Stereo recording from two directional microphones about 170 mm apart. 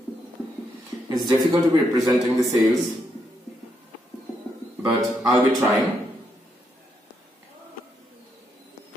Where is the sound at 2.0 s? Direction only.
Centre (ahead or behind).